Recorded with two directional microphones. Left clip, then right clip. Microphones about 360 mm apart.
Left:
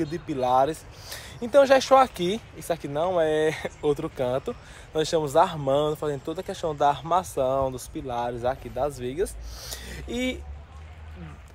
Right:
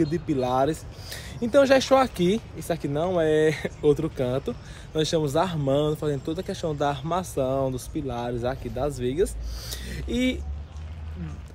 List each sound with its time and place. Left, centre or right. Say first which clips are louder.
0.0 s speech: right 2 dB; centre